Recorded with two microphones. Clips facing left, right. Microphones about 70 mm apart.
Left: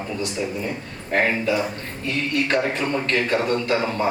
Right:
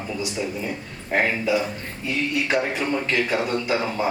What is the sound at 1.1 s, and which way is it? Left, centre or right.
A man's voice, centre.